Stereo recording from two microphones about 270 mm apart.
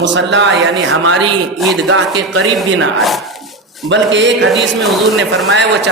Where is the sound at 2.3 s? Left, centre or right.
Right.